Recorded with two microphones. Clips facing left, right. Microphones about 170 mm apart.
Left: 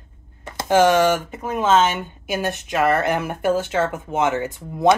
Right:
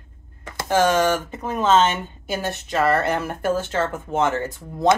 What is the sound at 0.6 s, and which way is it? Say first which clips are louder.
Speech: left 3 dB; 15° left (ahead or behind).